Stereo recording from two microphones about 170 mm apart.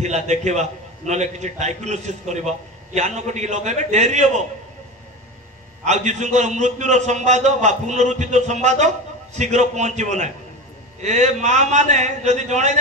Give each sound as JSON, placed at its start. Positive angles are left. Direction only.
{"t": 0.0, "sound": "a man's voice", "side_deg": -40}
{"t": 5.9, "sound": "a man's voice", "side_deg": -45}